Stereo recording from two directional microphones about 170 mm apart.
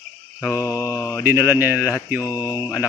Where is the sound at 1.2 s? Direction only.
10° right (ahead or behind).